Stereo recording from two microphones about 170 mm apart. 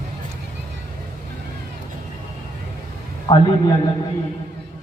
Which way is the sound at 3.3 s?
20° left (ahead or behind).